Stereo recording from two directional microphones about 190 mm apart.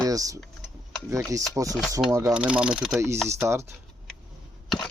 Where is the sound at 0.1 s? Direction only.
20° right (ahead or behind); by 3.0 s centre (ahead or behind).